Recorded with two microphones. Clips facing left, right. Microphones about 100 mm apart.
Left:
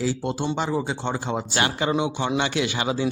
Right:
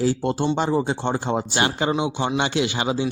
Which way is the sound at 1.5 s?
25° right (ahead or behind).